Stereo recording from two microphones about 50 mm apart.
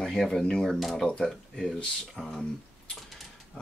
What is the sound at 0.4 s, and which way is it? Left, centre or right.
Speech, centre.